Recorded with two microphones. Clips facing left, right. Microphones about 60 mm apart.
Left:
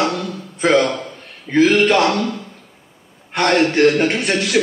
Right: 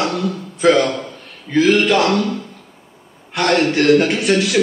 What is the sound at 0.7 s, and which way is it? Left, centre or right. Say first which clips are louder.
Speech: left 1 dB; centre.